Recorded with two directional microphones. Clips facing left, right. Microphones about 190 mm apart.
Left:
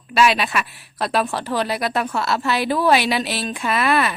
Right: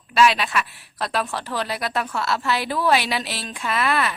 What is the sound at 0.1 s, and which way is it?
Speech, 10° left (ahead or behind).